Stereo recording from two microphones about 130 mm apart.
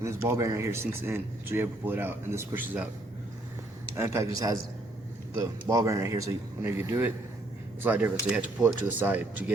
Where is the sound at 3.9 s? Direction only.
20° right (ahead or behind).